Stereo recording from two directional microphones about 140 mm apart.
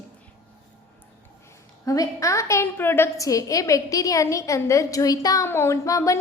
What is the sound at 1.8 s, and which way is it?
A woman's voice, 25° left (ahead or behind).